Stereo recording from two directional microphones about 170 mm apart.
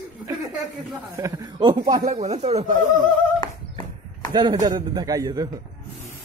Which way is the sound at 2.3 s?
40° right (ahead or behind).